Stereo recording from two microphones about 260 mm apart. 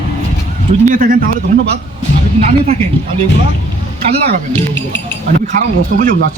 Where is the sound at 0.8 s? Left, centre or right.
Right.